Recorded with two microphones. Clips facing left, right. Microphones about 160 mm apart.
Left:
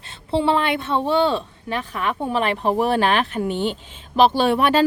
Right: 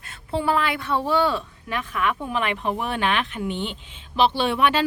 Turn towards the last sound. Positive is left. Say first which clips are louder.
# left 4 dB
turn(degrees=40)  # may be behind; listen again after turning